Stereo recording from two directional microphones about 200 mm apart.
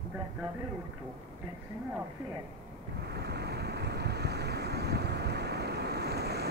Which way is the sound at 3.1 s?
55° right (ahead or behind).